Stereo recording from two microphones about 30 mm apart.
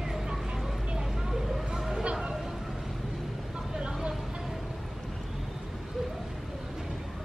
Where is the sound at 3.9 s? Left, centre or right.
Right.